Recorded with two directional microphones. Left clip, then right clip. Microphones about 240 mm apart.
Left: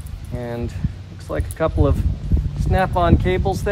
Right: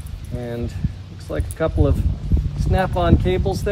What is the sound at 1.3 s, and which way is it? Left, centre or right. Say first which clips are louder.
Speech: left 1 dB; centre.